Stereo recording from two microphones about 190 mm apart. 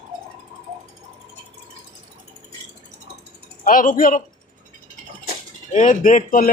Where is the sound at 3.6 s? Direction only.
45° left (ahead or behind).